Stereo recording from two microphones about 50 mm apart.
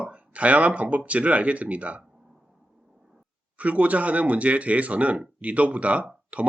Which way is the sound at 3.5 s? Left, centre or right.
Right.